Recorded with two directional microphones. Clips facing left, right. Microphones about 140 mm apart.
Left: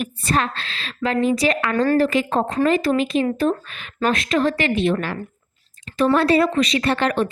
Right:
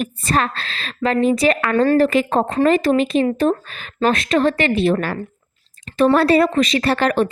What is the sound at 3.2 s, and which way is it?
A woman's voice, 35° right (ahead or behind).